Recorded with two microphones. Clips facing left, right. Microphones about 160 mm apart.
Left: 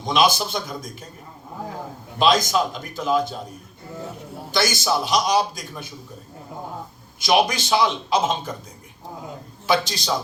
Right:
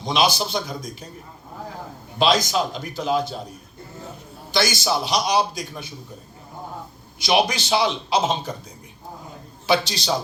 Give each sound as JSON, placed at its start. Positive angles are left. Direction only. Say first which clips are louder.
{"t": 0.0, "sound": "a man's voice", "louder": "left 2 dB", "side_deg": 50}
{"t": 2.2, "sound": "a man's voice", "louder": "left 1 dB", "side_deg": 50}
{"t": 4.5, "sound": "a man's voice", "louder": "even", "side_deg": 50}
{"t": 7.3, "sound": "a man's voice", "louder": "left 1 dB", "side_deg": 50}
{"t": 9.6, "sound": "a man's voice", "louder": "even", "side_deg": 45}